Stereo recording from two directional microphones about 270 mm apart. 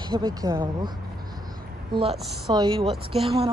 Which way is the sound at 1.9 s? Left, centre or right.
Centre.